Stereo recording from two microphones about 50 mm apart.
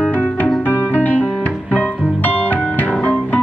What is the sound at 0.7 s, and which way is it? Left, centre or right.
Music, left.